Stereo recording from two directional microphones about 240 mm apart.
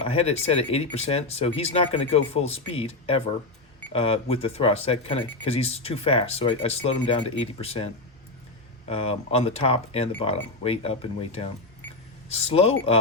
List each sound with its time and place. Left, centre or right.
0.0 s speech: left
8.9 s speech: left